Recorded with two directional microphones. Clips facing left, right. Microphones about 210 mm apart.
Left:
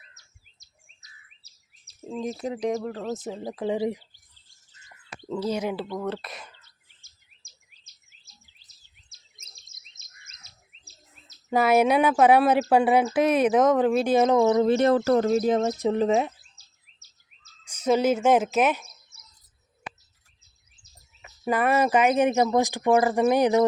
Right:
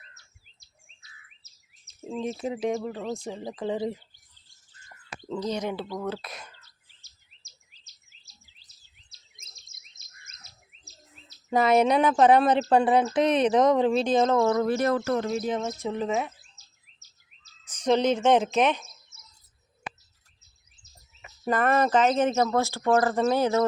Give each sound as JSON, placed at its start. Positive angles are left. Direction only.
{"t": 0.2, "sound": "chirp", "side_deg": 40}
{"t": 2.0, "sound": "speech", "side_deg": 0}
{"t": 5.3, "sound": "speech", "side_deg": 5}
{"t": 6.6, "sound": "chirp", "side_deg": 50}
{"t": 9.4, "sound": "bird", "side_deg": -50}
{"t": 11.5, "sound": "speech", "side_deg": 5}
{"t": 17.7, "sound": "speech", "side_deg": 5}
{"t": 21.4, "sound": "speech", "side_deg": 10}